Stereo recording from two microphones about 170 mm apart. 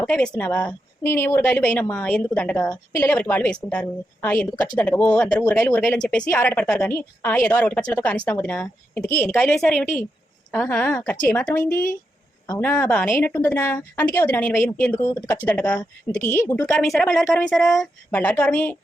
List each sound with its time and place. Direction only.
0.0 s a woman's voice: 5° left (ahead or behind)
16.8 s a woman's voice: 5° left (ahead or behind)